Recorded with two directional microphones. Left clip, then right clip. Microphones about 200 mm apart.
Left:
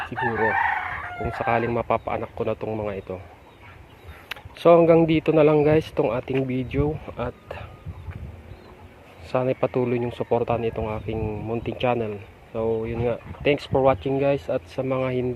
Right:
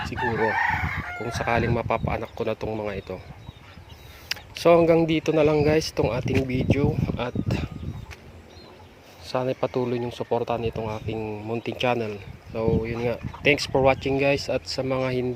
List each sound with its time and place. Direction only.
0.2 s chicken: 30° right (ahead or behind)
1.2 s speech: 10° right (ahead or behind)
4.3 s speech: 5° right (ahead or behind)
9.2 s speech: centre (ahead or behind)